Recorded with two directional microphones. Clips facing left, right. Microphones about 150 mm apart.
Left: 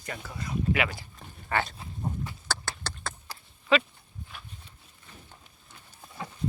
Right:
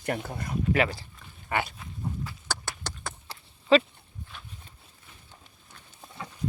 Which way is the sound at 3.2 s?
35° right (ahead or behind).